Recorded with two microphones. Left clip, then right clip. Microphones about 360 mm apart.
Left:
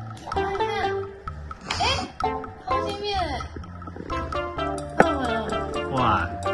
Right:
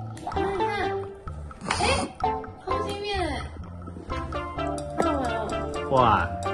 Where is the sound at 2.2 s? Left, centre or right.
Centre.